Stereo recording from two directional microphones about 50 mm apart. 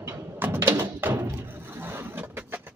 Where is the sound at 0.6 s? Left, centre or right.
Right.